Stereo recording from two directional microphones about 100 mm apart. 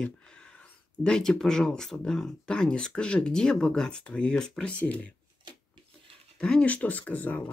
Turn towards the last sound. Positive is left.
turn(degrees=20)  # may be behind; listen again after turning